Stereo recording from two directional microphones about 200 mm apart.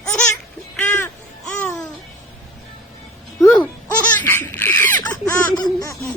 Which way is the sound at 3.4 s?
10° left (ahead or behind).